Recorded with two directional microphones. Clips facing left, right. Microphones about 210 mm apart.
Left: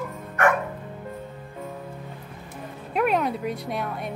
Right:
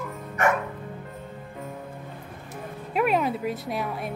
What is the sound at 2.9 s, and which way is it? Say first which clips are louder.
Speech: even; centre (ahead or behind).